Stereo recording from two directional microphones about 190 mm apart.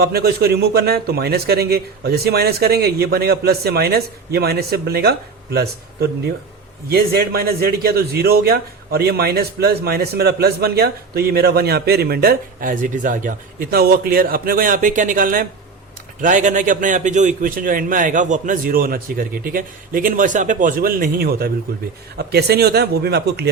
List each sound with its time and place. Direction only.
0.0 s a man's voice: 55° right (ahead or behind)